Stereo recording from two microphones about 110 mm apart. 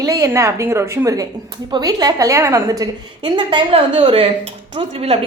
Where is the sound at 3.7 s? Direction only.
55° right (ahead or behind).